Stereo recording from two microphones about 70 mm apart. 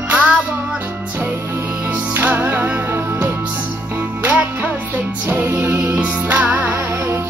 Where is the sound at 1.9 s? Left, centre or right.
Right.